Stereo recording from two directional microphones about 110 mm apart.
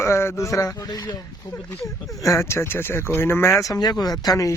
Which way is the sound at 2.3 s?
25° left (ahead or behind).